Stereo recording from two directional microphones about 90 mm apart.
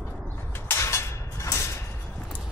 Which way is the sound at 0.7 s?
30° left (ahead or behind).